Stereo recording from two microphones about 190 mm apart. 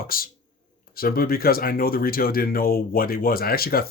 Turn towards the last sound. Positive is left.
turn(degrees=55)  # may be behind; listen again after turning